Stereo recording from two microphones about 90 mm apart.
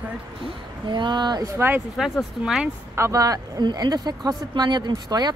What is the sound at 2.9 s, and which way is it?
Speech, 35° right (ahead or behind).